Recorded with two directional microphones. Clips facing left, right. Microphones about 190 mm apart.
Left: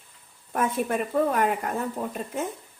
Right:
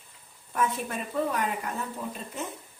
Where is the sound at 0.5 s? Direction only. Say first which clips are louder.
Left 4 dB; 50° left (ahead or behind).